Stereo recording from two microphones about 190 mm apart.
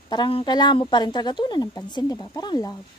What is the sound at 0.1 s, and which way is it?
A woman's voice, 25° left (ahead or behind).